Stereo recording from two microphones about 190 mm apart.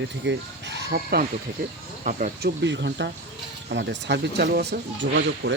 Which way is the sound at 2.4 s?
65° right (ahead or behind).